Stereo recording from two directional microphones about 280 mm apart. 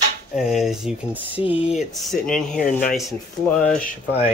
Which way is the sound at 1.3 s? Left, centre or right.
Centre.